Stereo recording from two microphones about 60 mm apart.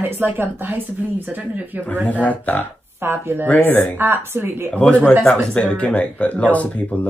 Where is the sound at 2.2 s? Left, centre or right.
Left.